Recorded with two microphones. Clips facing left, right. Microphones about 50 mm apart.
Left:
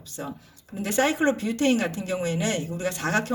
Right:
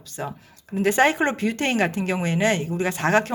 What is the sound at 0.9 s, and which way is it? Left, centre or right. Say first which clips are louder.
Speech: right 3 dB; right.